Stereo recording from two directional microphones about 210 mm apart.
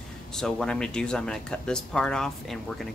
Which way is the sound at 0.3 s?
5° left (ahead or behind).